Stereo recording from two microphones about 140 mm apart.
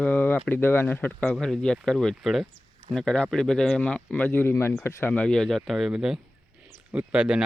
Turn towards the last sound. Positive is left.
turn(degrees=-5)  # may be behind; listen again after turning